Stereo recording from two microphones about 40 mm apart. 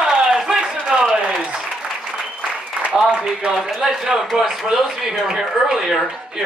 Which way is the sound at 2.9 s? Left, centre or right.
Right.